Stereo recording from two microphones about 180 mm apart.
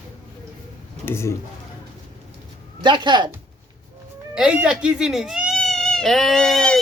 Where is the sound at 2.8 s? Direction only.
25° right (ahead or behind).